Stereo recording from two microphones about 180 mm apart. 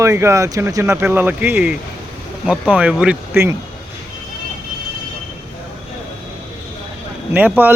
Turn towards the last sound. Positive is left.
turn(degrees=-10)  # may be behind; listen again after turning